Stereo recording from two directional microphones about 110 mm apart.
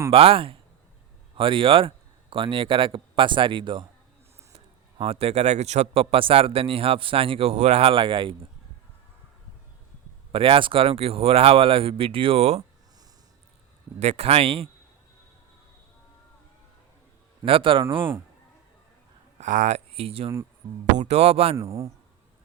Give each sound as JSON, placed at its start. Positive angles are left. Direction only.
{"t": 0.1, "sound": "speech", "side_deg": -60}
{"t": 4.5, "sound": "speech", "side_deg": -60}
{"t": 10.3, "sound": "speech", "side_deg": -55}
{"t": 14.0, "sound": "speech", "side_deg": -80}
{"t": 17.4, "sound": "speech", "side_deg": -55}
{"t": 19.4, "sound": "speech", "side_deg": -90}
{"t": 20.9, "sound": "speech", "side_deg": -85}
{"t": 21.5, "sound": "speech", "side_deg": -30}